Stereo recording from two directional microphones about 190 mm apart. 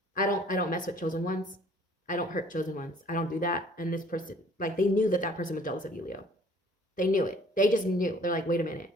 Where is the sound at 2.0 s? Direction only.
45° left (ahead or behind).